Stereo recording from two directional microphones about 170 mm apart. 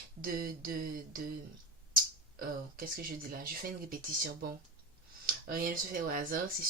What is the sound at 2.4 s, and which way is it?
Speech, 60° right (ahead or behind).